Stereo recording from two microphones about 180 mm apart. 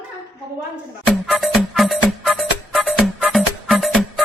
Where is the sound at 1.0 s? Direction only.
Centre (ahead or behind).